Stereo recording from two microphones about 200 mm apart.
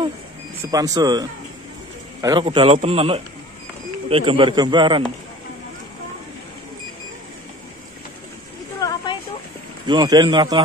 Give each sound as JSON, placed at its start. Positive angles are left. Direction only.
{"t": 0.7, "sound": "speech", "side_deg": -20}
{"t": 2.2, "sound": "a man's voice", "side_deg": -20}
{"t": 8.8, "sound": "a sound", "side_deg": 20}
{"t": 9.8, "sound": "a man's voice", "side_deg": -20}